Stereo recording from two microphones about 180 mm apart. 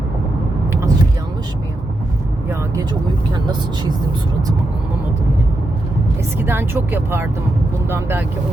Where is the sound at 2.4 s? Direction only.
15° right (ahead or behind).